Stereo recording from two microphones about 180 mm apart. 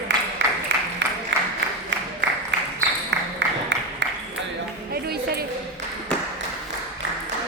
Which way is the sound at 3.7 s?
80° right.